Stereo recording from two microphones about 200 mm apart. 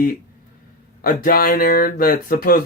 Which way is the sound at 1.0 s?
45° left (ahead or behind).